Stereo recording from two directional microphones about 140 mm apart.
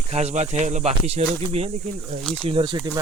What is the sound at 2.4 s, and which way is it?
Speech, 40° right (ahead or behind).